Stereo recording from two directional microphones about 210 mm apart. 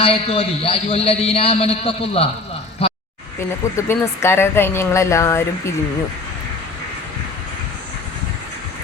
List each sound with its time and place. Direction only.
0.0 s a man's voice: 25° left (ahead or behind)
3.8 s speech: 15° left (ahead or behind)